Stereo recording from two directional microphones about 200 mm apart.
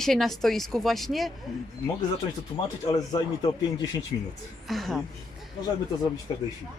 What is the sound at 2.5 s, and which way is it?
Speech, 20° left (ahead or behind).